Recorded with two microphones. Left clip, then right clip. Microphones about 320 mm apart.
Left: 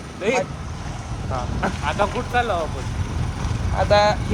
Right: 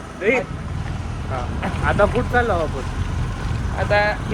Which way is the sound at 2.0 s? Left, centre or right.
Centre.